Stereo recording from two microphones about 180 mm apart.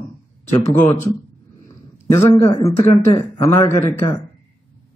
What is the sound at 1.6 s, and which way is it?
A man's voice, 15° left (ahead or behind).